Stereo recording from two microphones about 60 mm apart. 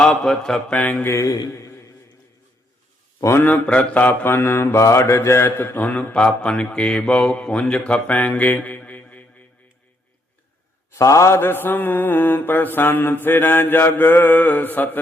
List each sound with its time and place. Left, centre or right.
0.0 s a man's voice: centre
1.2 s a man's voice: left
3.5 s mantra: left
5.8 s a man's voice: left
6.1 s a man's voice: centre
7.9 s speech: left
10.9 s a man's voice: left
11.3 s mantra: left